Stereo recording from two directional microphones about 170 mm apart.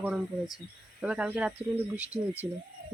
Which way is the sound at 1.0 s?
5° right (ahead or behind).